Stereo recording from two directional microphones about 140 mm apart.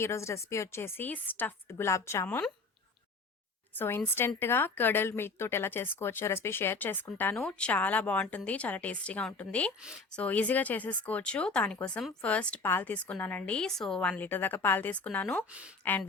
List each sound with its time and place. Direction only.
0.0 s speech: 20° left (ahead or behind)
3.8 s speech: 15° left (ahead or behind)